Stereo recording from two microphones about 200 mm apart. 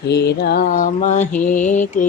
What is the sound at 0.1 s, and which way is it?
Mantra, 55° left (ahead or behind).